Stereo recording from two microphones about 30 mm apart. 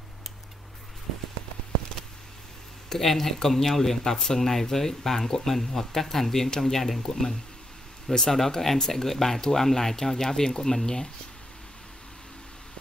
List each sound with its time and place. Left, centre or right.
2.9 s speech: centre
4.0 s speech: left
8.1 s speech: centre
8.4 s speech: centre